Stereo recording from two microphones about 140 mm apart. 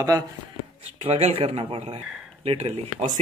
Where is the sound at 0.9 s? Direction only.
45° right (ahead or behind).